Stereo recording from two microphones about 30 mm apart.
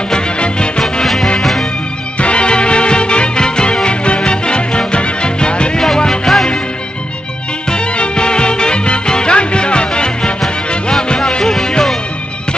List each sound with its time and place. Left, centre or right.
1.0 s music: centre
2.1 s music: left
3.8 s music: left
6.3 s music: centre
7.7 s music: left
10.9 s music: left